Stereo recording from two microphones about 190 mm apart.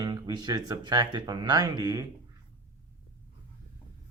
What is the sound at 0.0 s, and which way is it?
Speech, 20° right (ahead or behind).